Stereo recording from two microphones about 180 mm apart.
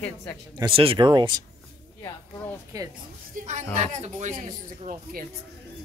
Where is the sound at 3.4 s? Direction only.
40° right (ahead or behind).